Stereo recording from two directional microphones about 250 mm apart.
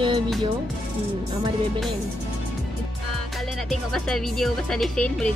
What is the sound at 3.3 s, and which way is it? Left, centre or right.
Speech, centre.